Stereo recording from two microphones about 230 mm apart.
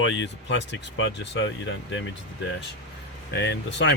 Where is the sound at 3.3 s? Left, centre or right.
Left.